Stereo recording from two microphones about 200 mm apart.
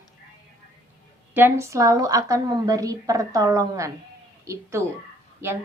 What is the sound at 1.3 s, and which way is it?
A woman's voice, 10° right (ahead or behind).